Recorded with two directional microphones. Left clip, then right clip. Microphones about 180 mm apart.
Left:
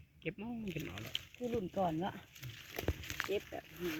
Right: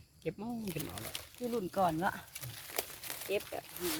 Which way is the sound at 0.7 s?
20° right (ahead or behind).